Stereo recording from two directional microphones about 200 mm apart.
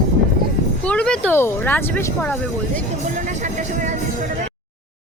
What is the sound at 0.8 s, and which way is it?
Speech, 5° left (ahead or behind).